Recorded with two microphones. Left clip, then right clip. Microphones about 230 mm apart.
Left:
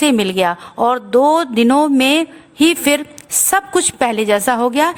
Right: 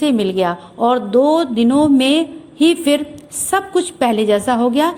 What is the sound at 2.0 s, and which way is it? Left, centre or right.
Speech, left.